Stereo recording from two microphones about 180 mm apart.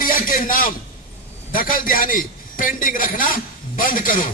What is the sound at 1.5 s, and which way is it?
A man's voice, 50° left (ahead or behind).